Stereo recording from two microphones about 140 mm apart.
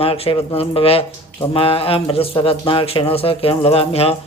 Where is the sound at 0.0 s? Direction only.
45° left (ahead or behind).